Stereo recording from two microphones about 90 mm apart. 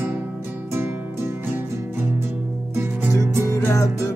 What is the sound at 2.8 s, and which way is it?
Music, 25° right (ahead or behind).